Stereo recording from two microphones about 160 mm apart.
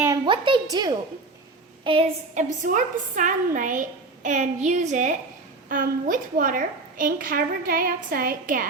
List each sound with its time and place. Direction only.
0.3 s a woman's voice: 30° right (ahead or behind)
2.3 s a woman's voice: 50° right (ahead or behind)
5.6 s a woman's voice: 60° right (ahead or behind)